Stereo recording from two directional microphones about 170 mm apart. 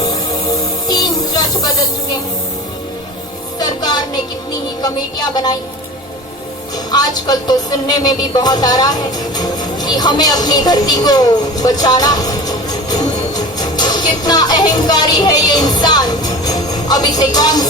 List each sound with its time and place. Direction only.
0.9 s music: 25° left (ahead or behind)
3.6 s music: 25° left (ahead or behind)
4.8 s speech: 25° left (ahead or behind)
6.9 s music: 25° left (ahead or behind)